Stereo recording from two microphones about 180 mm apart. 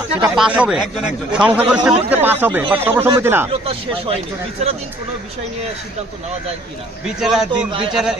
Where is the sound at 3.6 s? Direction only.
30° right (ahead or behind).